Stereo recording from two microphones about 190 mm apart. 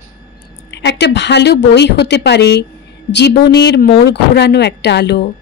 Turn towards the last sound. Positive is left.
turn(degrees=65)  # may be behind; listen again after turning